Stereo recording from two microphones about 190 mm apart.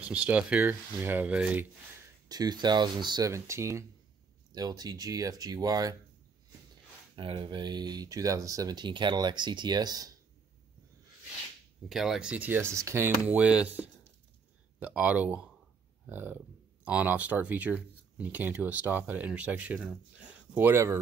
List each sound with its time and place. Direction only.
0.0 s speech: 5° right (ahead or behind)
2.2 s speech: 20° right (ahead or behind)
7.2 s speech: 25° right (ahead or behind)
11.9 s speech: centre (ahead or behind)